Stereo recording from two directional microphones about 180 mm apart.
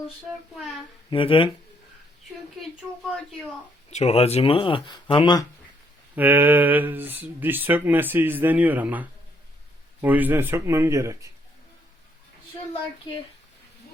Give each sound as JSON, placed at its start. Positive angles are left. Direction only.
{"t": 1.1, "sound": "speech", "side_deg": 30}
{"t": 3.8, "sound": "speech", "side_deg": 35}
{"t": 6.1, "sound": "speech", "side_deg": -10}